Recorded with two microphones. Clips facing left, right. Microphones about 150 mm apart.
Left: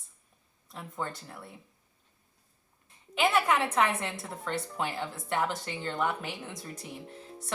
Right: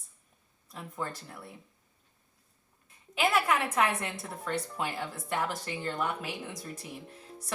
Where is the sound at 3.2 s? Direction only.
25° left (ahead or behind).